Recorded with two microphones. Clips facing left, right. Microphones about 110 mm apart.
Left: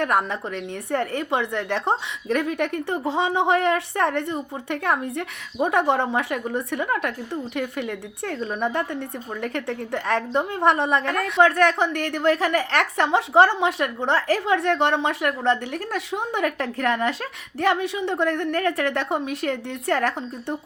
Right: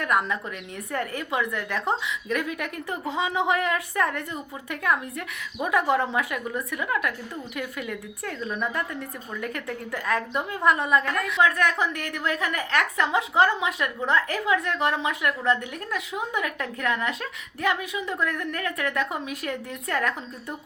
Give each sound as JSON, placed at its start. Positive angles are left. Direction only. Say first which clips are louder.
{"t": 0.0, "sound": "a woman's voice", "louder": "left 3 dB", "side_deg": 30}
{"t": 6.3, "sound": "a woman's voice", "louder": "left 5 dB", "side_deg": 35}
{"t": 8.2, "sound": "a woman's voice", "louder": "left 5 dB", "side_deg": 30}